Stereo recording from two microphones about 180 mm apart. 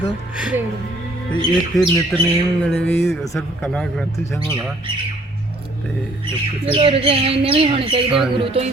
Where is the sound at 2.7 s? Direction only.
10° left (ahead or behind).